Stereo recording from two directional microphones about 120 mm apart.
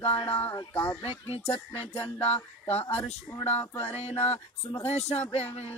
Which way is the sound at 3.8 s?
60° left (ahead or behind).